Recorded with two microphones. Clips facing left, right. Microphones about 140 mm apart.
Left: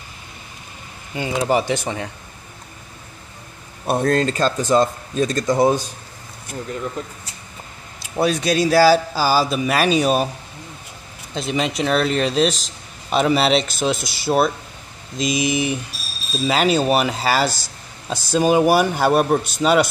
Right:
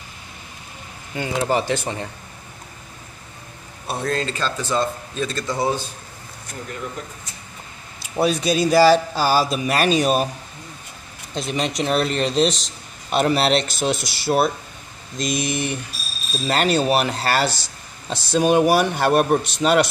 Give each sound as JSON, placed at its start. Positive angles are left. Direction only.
{"t": 1.4, "sound": "speech", "side_deg": 10}
{"t": 3.8, "sound": "speech", "side_deg": 50}
{"t": 5.5, "sound": "speech", "side_deg": 15}
{"t": 8.0, "sound": "a man's voice", "side_deg": 0}
{"t": 11.3, "sound": "a man's voice", "side_deg": 0}